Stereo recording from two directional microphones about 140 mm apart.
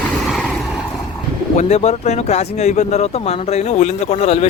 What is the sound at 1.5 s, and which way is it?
Speech, 55° left (ahead or behind).